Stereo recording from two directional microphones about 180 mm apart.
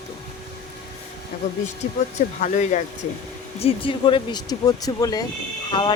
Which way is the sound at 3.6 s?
30° left (ahead or behind).